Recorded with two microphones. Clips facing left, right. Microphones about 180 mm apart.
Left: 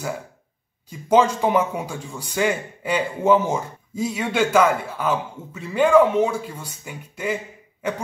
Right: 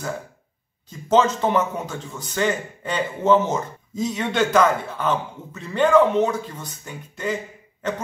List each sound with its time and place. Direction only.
0.8 s a man's voice: 10° left (ahead or behind)